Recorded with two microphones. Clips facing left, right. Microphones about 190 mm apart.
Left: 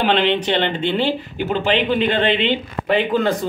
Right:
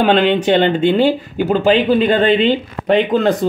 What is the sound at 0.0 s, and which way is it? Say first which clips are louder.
Speech: right 5 dB; 45° right (ahead or behind).